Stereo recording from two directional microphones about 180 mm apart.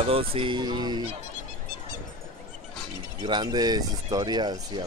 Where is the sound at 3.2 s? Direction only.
25° right (ahead or behind).